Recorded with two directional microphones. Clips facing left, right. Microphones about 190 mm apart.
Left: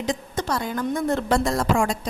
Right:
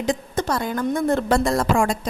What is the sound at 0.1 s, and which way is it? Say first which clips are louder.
A woman's voice: right 3 dB; 50° right (ahead or behind).